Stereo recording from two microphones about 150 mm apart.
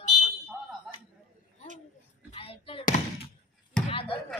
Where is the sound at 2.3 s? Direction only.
40° left (ahead or behind).